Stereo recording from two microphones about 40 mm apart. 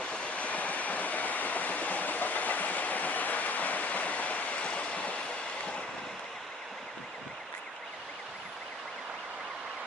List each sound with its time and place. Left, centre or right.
0.0 s train: left